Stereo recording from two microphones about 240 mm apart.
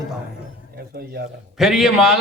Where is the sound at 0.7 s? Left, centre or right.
Right.